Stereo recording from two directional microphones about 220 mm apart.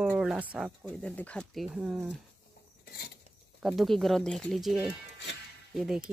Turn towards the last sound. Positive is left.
turn(degrees=0)  # may be behind; listen again after turning